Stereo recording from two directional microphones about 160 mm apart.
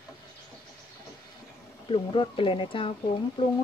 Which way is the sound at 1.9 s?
35° left (ahead or behind).